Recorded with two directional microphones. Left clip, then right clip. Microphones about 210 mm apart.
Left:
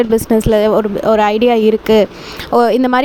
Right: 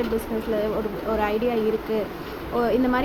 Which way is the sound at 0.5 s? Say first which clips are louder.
Left 12 dB; 55° left (ahead or behind).